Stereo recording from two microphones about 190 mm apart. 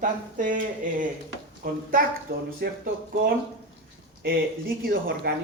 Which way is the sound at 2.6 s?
55° right (ahead or behind).